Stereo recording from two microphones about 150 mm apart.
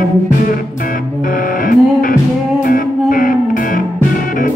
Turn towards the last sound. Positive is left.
turn(degrees=70)  # may be behind; listen again after turning